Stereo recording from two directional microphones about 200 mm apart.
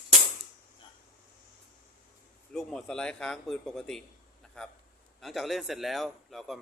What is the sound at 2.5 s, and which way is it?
A man's voice, 5° left (ahead or behind).